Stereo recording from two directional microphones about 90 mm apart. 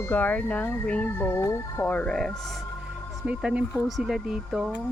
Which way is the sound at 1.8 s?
15° left (ahead or behind).